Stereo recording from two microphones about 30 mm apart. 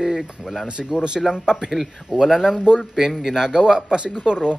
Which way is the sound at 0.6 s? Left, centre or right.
Right.